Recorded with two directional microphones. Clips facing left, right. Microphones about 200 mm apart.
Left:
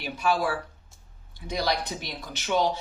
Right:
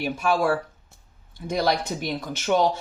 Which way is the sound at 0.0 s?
50° right (ahead or behind).